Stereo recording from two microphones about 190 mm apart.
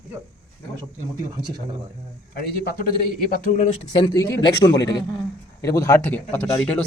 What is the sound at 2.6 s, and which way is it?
Speech, 45° left (ahead or behind).